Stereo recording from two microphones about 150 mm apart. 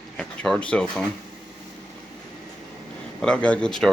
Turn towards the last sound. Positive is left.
turn(degrees=5)  # may be behind; listen again after turning